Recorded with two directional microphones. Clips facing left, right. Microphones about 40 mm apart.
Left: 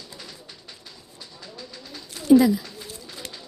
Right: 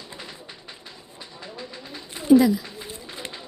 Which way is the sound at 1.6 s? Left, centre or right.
Right.